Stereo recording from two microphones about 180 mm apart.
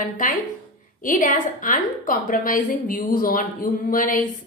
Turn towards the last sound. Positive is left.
turn(degrees=50)  # may be behind; listen again after turning